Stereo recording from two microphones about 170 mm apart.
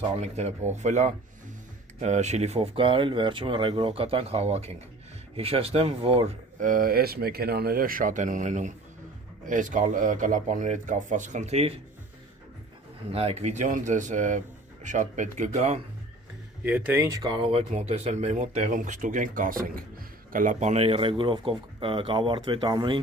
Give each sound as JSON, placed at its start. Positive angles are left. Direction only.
{"t": 0.2, "sound": "speech", "side_deg": -40}
{"t": 6.6, "sound": "speech", "side_deg": -55}
{"t": 13.1, "sound": "speech", "side_deg": -35}
{"t": 16.6, "sound": "speech", "side_deg": -10}
{"t": 17.2, "sound": "speech", "side_deg": -30}